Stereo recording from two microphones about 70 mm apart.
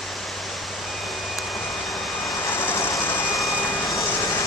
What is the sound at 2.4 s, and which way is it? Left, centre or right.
Vehicle, left.